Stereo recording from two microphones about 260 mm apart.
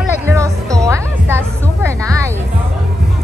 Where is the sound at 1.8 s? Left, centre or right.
Centre.